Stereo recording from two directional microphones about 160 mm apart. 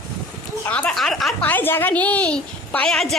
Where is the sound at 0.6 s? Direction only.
10° left (ahead or behind).